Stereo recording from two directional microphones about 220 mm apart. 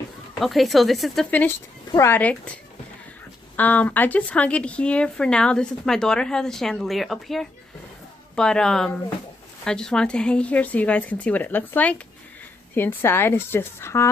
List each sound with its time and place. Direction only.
0.3 s speech: centre (ahead or behind)
3.6 s speech: 5° left (ahead or behind)